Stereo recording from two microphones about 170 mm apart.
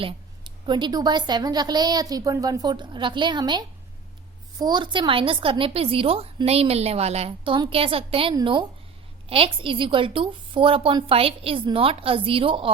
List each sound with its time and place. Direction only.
0.6 s a woman's voice: 25° right (ahead or behind)